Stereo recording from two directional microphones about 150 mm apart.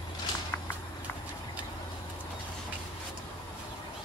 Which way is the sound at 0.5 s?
15° left (ahead or behind).